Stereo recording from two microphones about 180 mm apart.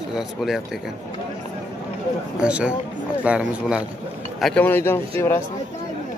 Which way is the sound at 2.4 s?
5° right (ahead or behind).